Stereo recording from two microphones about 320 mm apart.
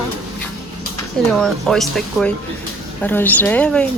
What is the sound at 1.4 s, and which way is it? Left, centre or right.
Speech, centre.